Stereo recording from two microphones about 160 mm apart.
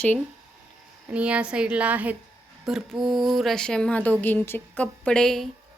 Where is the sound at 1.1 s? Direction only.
10° right (ahead or behind).